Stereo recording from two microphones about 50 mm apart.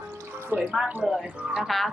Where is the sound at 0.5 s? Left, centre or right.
Right.